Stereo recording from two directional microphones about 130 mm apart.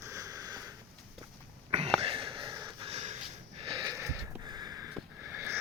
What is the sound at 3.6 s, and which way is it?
Sniff, 35° right (ahead or behind).